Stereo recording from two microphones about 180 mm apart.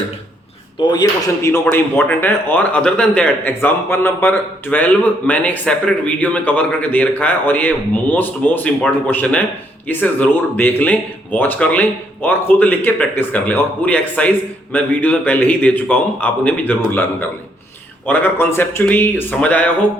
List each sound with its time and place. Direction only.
0.8 s speech: 25° left (ahead or behind)
1.4 s a man's voice: 15° left (ahead or behind)